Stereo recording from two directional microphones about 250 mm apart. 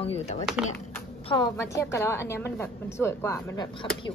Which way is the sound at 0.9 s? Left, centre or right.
Centre.